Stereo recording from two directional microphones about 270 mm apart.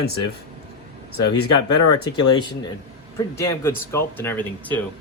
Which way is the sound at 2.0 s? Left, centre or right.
Centre.